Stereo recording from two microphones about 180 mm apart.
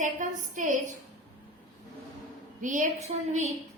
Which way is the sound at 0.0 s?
45° right (ahead or behind).